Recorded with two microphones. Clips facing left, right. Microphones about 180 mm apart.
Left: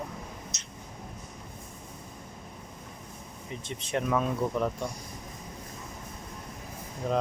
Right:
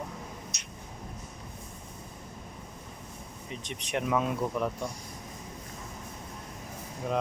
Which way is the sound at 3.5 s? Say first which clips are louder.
Left 2 dB; 15° right (ahead or behind).